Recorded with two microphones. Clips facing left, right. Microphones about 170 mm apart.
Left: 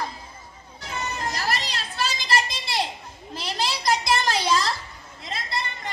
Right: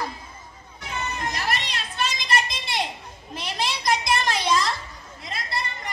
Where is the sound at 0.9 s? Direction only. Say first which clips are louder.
Even; 30° left (ahead or behind).